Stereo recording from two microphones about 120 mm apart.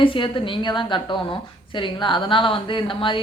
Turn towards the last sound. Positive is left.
turn(degrees=45)  # may be behind; listen again after turning